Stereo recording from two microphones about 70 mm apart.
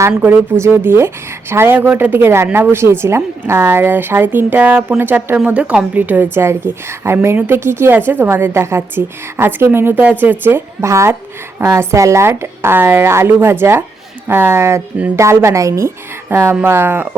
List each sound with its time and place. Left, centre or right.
0.3 s a woman's voice: right
5.5 s a woman's voice: centre
6.3 s speech: right
10.8 s a woman's voice: right
15.1 s a woman's voice: right